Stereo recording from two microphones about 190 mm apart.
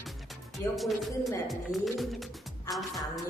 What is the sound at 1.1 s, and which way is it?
Speech, 15° left (ahead or behind).